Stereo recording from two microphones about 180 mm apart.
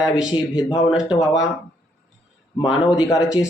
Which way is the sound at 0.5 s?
30° left (ahead or behind).